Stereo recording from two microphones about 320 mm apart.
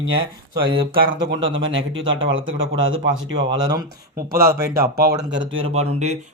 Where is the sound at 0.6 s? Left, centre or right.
Centre.